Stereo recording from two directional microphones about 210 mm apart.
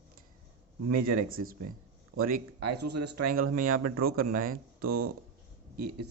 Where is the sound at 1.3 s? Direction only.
45° right (ahead or behind).